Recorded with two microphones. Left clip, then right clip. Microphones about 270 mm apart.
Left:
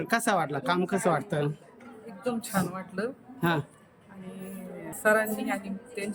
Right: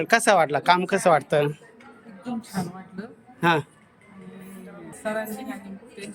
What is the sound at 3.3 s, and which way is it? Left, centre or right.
Speech, centre.